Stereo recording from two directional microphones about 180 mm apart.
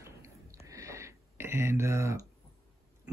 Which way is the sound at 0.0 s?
15° right (ahead or behind).